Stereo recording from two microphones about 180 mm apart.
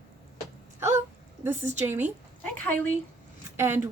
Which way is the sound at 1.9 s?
10° right (ahead or behind).